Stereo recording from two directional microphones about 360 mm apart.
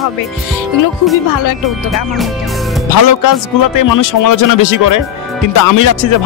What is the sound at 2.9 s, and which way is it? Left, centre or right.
Speech, left.